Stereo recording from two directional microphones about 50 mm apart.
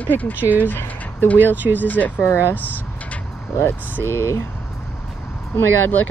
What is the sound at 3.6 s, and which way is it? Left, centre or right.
Speech, left.